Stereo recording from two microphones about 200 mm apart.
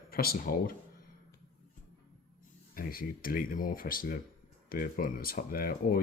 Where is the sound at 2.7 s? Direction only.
45° left (ahead or behind).